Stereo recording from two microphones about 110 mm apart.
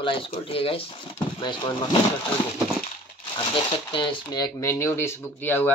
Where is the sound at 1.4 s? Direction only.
45° left (ahead or behind).